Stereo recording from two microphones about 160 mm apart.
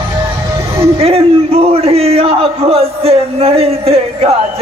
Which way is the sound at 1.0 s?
40° right (ahead or behind).